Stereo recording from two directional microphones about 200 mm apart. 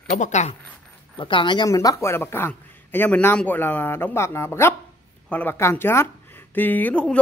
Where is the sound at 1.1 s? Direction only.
25° left (ahead or behind).